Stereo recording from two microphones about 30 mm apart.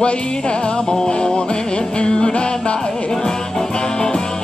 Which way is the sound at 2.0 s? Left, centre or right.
Left.